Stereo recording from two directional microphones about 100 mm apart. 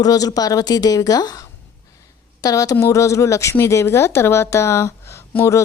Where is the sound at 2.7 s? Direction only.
30° left (ahead or behind).